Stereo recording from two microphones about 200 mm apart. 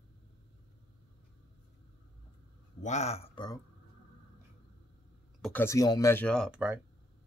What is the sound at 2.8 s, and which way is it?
Speech, 35° left (ahead or behind).